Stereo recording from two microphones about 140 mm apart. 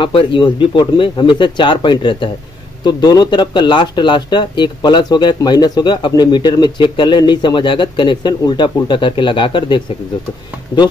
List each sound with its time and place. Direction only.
0.0 s speech: 40° left (ahead or behind)